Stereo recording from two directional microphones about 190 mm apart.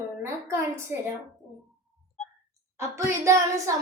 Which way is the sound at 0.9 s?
10° right (ahead or behind).